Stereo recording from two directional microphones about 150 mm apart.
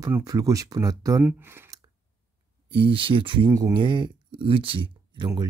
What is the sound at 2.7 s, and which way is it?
Speech, 35° right (ahead or behind).